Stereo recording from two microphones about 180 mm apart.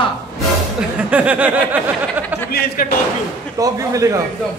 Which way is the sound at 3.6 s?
20° right (ahead or behind).